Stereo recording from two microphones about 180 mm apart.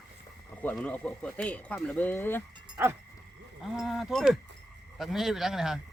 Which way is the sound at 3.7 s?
Centre (ahead or behind).